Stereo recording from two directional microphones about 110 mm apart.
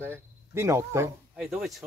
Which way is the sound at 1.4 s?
5° right (ahead or behind).